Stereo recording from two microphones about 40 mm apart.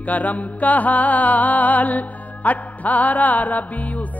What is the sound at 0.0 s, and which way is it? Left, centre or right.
Mantra, left.